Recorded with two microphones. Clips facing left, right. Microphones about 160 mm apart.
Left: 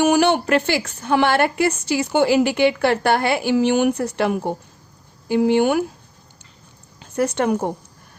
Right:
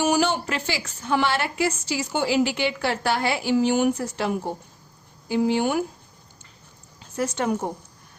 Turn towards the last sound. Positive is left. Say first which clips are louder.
# left 5 dB
turn(degrees=60)  # may be behind; listen again after turning